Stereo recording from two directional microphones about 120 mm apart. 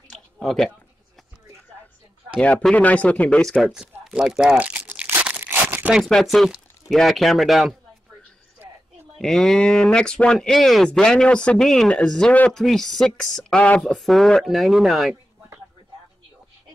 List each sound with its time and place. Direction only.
0.1 s a sound: 5° left (ahead or behind)
2.4 s speech: 10° left (ahead or behind)
3.7 s crunch: 5° right (ahead or behind)
6.0 s speech: centre (ahead or behind)
9.2 s speech: 5° left (ahead or behind)